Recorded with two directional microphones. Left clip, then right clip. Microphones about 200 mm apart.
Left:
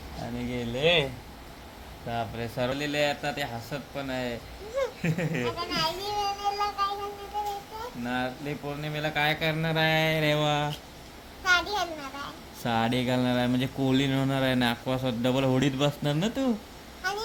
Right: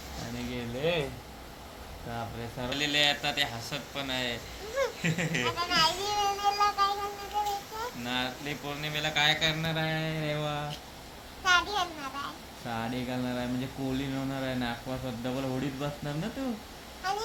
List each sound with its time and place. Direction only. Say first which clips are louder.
0.3 s a sound: left 5 dB; 45° left (ahead or behind)
2.1 s speech: left 7 dB; 50° left (ahead or behind)
5.5 s music: right 4 dB; 5° left (ahead or behind)
8.0 s speech: left 3 dB; 50° left (ahead or behind)
11.4 s a child's voice: left 1 dB; centre (ahead or behind)
12.6 s speech: left 8 dB; 60° left (ahead or behind)
17.0 s vehicle: left 1 dB; 5° left (ahead or behind)